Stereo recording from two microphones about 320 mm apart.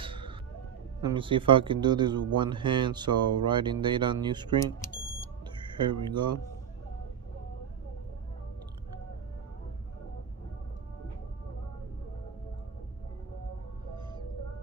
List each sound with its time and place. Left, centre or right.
0.0 s a sound: centre
1.0 s speech: centre
5.8 s speech: centre